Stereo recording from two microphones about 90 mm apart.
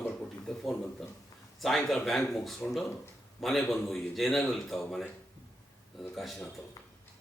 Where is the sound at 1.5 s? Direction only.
5° left (ahead or behind).